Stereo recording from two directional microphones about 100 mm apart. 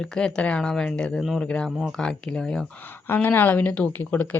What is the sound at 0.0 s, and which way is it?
Speech, 10° left (ahead or behind).